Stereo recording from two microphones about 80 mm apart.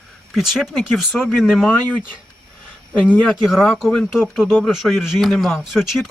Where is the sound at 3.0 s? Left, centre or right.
Centre.